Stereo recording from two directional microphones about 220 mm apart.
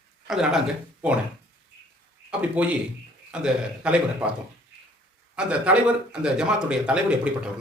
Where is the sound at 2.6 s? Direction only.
5° right (ahead or behind).